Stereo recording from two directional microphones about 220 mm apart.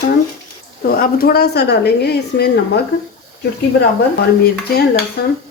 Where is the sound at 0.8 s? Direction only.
40° left (ahead or behind).